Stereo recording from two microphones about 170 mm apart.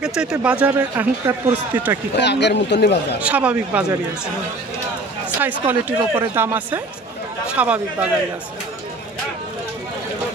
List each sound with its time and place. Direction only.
0.0 s speech: 5° right (ahead or behind)
2.1 s a man's voice: 90° left
3.2 s speech: 5° right (ahead or behind)
5.4 s speech: 10° right (ahead or behind)